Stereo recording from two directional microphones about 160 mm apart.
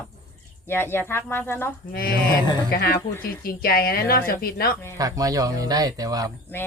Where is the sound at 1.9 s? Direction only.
65° left (ahead or behind).